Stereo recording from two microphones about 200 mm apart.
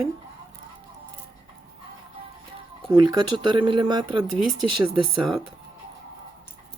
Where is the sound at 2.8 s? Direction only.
20° right (ahead or behind).